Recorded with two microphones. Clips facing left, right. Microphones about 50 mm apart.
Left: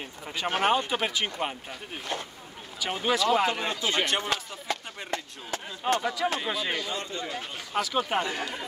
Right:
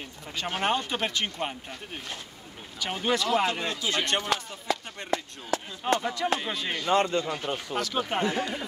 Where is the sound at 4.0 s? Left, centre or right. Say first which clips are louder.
Right 1 dB; centre.